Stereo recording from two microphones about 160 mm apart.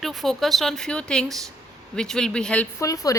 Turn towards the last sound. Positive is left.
turn(degrees=20)  # may be behind; listen again after turning